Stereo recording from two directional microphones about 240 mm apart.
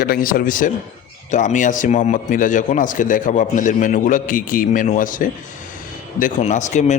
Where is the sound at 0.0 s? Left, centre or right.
Left.